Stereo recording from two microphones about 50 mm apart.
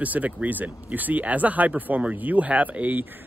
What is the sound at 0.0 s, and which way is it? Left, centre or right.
Speech, right.